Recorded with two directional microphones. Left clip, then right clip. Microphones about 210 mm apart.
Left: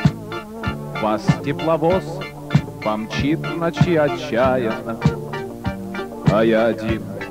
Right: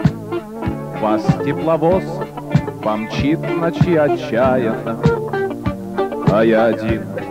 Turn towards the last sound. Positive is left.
turn(degrees=-25)  # may be behind; listen again after turning